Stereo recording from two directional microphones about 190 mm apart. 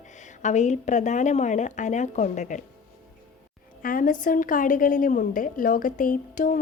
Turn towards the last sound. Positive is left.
turn(degrees=45)  # may be behind; listen again after turning